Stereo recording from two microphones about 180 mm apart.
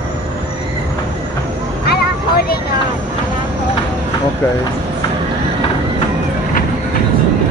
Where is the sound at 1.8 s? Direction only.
60° left (ahead or behind).